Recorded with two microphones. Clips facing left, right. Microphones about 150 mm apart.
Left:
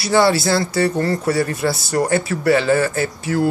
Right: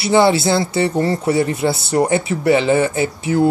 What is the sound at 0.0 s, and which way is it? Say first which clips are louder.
Speech: right 2 dB; 25° right (ahead or behind).